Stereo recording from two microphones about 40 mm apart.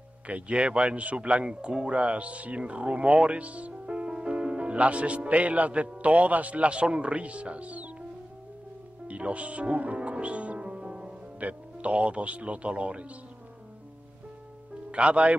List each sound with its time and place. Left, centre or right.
0.3 s speech: right
9.0 s music: right
11.3 s speech: right
14.9 s a man's voice: right